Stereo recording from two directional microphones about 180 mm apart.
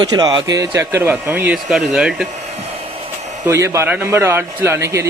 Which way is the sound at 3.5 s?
15° right (ahead or behind).